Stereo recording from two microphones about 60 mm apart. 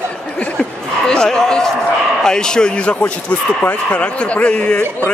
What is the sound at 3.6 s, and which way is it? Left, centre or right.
Speech, left.